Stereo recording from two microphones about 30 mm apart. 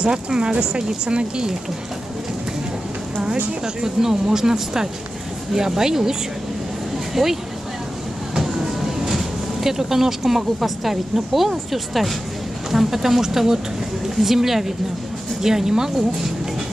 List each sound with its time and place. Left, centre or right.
0.0 s speech: right
3.6 s speech: centre
7.2 s speech: centre
8.4 s speech: centre